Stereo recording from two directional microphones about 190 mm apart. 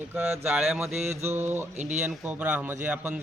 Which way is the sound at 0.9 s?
35° right (ahead or behind).